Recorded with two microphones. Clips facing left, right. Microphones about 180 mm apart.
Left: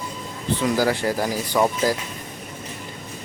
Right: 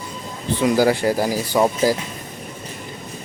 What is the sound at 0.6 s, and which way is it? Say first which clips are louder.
Speech: right 5 dB; 15° right (ahead or behind).